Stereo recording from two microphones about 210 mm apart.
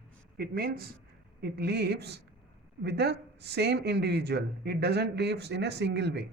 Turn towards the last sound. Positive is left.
turn(degrees=-55)  # may be behind; listen again after turning